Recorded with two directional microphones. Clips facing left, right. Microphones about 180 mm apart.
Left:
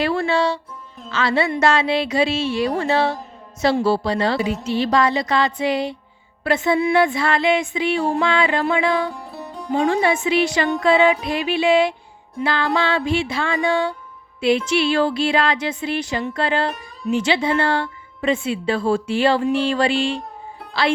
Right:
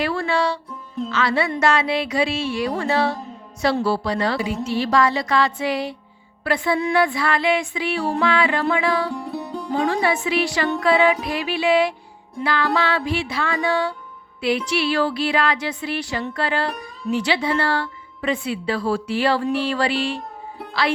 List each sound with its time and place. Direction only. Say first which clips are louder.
0.0 s speech: left 2 dB; 25° left (ahead or behind)
9.1 s music: right 5 dB; centre (ahead or behind)
9.7 s speech: left 3 dB; 25° left (ahead or behind)